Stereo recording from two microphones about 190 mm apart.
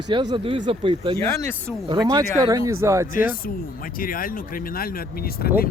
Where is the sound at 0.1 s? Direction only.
25° right (ahead or behind).